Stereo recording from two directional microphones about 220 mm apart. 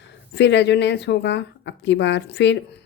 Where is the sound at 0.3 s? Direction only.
50° left (ahead or behind).